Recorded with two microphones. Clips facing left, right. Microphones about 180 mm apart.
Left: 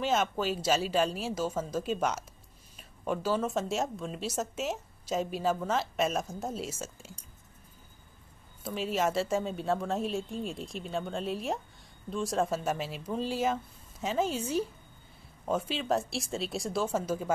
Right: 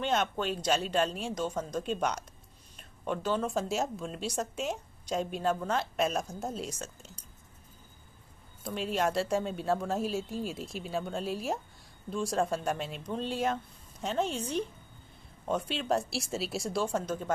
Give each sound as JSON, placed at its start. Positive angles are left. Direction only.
{"t": 0.0, "sound": "speech", "side_deg": 5}
{"t": 8.6, "sound": "speech", "side_deg": 0}